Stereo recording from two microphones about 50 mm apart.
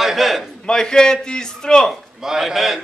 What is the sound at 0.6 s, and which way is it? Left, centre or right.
A man's voice, centre.